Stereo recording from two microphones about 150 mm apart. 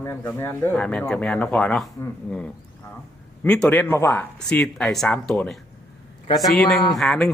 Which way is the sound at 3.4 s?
5° left (ahead or behind).